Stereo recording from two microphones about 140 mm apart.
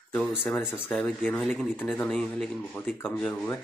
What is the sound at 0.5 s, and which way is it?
Speech, 15° left (ahead or behind).